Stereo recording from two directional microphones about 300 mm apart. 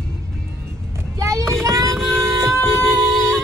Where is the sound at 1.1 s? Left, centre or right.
Centre.